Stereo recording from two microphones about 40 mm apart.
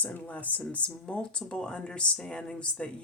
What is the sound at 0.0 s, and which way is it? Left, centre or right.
Speech, left.